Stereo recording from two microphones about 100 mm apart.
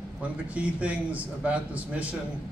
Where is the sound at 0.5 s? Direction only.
10° right (ahead or behind).